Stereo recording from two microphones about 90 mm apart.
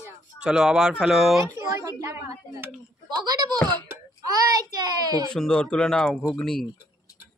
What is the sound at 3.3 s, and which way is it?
Speech, 50° right (ahead or behind).